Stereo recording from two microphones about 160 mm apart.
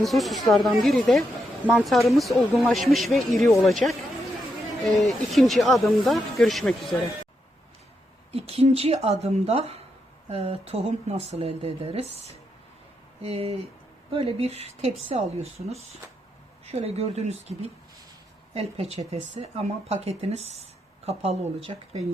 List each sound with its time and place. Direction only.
0.0 s speech: centre (ahead or behind)
4.9 s speech: centre (ahead or behind)
8.3 s speech: 40° right (ahead or behind)